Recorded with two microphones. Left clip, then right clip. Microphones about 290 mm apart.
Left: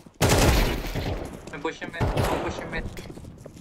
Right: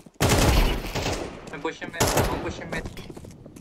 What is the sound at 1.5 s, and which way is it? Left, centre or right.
Speech, centre.